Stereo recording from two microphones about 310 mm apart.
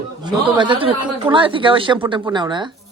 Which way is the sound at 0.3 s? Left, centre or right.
Centre.